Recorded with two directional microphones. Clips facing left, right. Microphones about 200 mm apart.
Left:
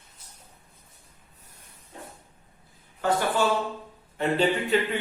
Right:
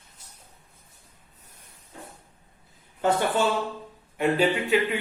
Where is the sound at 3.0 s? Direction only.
20° right (ahead or behind).